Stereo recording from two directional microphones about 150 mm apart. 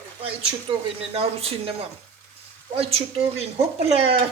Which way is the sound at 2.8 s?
40° right (ahead or behind).